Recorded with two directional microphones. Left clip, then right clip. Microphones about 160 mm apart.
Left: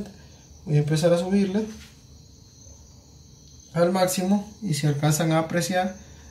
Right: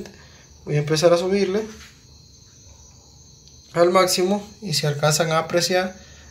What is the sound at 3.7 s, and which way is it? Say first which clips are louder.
A man's voice: right 5 dB; 40° right (ahead or behind).